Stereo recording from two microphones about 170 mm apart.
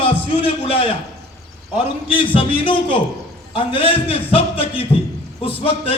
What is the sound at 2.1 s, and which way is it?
A man's voice, 30° left (ahead or behind).